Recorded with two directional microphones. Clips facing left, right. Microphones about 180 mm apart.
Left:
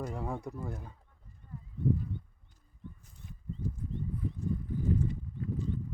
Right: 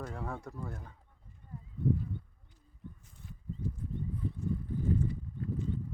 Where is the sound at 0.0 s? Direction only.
15° left (ahead or behind).